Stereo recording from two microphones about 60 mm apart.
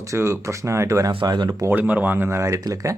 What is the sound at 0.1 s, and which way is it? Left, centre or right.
Speech, right.